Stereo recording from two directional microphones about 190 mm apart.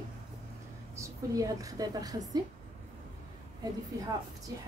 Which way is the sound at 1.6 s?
20° right (ahead or behind).